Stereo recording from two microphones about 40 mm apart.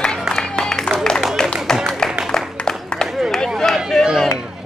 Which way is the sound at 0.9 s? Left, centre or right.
Centre.